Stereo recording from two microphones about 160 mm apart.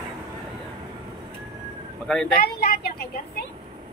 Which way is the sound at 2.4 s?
70° left (ahead or behind).